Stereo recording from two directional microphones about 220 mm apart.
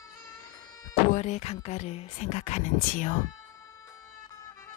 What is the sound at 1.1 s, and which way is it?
Speech, 30° left (ahead or behind).